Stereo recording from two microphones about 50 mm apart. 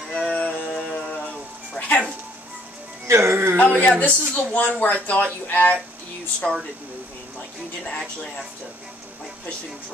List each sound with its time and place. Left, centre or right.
0.1 s music: left
3.1 s speech: right
3.5 s speech: left
6.4 s speech: centre